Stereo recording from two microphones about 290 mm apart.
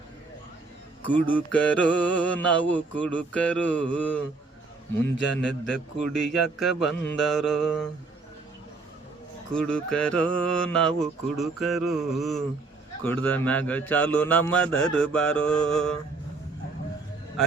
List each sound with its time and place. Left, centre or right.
1.1 s mantra: centre
5.1 s a man's voice: left
6.1 s mantra: centre
9.5 s mantra: centre